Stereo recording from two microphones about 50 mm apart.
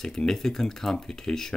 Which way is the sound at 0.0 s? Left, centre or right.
Centre.